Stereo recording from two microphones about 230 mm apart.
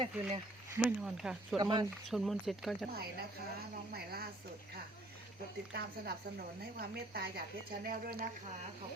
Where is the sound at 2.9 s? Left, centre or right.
Right.